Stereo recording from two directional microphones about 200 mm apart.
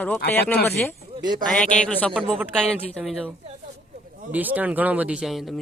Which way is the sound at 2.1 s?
5° right (ahead or behind).